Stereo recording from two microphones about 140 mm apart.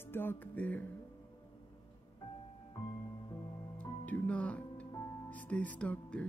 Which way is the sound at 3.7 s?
10° left (ahead or behind).